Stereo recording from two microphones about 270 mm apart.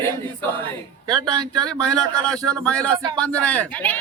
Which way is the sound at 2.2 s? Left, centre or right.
Centre.